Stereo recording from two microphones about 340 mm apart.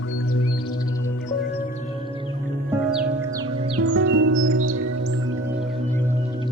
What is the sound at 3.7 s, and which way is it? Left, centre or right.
Music, right.